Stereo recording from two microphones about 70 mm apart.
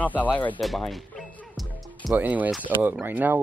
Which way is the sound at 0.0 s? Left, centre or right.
Left.